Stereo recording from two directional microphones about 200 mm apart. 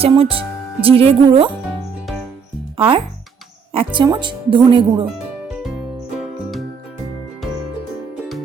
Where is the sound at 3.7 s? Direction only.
25° right (ahead or behind).